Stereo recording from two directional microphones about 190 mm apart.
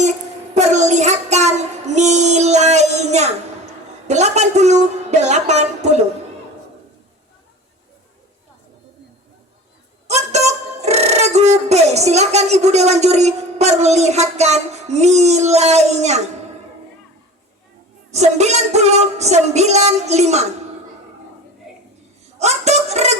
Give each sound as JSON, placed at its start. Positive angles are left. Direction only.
{"t": 0.0, "sound": "child singing", "side_deg": -35}
{"t": 4.0, "sound": "music", "side_deg": -35}
{"t": 10.1, "sound": "music", "side_deg": -35}
{"t": 18.1, "sound": "music", "side_deg": -35}
{"t": 21.7, "sound": "a sound", "side_deg": -5}
{"t": 22.4, "sound": "speech", "side_deg": -35}